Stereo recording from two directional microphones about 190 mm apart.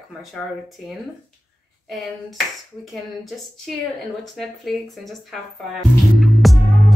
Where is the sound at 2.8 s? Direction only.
Centre (ahead or behind).